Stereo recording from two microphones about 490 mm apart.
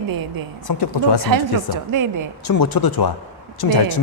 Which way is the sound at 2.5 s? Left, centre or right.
Left.